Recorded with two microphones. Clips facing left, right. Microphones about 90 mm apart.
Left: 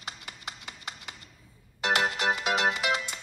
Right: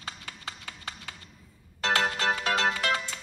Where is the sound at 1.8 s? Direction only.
15° left (ahead or behind).